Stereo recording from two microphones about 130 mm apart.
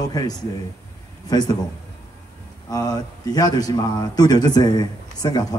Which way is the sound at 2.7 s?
30° left (ahead or behind).